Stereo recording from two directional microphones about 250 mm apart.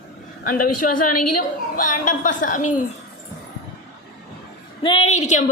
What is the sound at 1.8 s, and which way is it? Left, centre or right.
A woman's voice, left.